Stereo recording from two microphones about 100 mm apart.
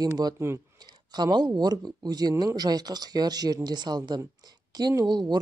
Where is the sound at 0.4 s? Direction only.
30° right (ahead or behind).